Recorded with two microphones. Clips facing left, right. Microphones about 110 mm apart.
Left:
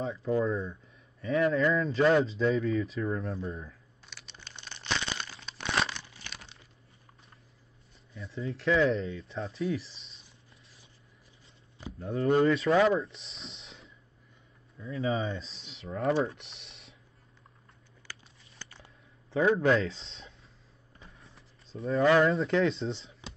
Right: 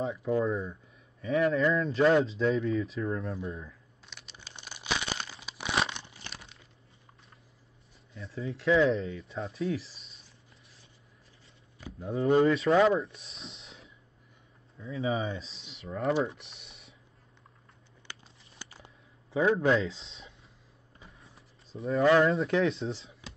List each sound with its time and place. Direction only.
0.0 s speech: 5° right (ahead or behind)
4.0 s crumpling: centre (ahead or behind)
4.4 s crumpling: 10° right (ahead or behind)
5.9 s crumpling: 20° right (ahead or behind)
8.1 s speech: centre (ahead or behind)
12.0 s speech: centre (ahead or behind)
16.3 s typing: centre (ahead or behind)
18.2 s a sound: 30° right (ahead or behind)
18.6 s a sound: 15° right (ahead or behind)
19.3 s speech: 5° right (ahead or behind)
21.0 s a sound: centre (ahead or behind)
22.1 s speech: centre (ahead or behind)